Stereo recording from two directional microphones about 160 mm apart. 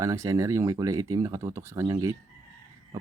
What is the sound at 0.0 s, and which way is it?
Speech, 20° right (ahead or behind).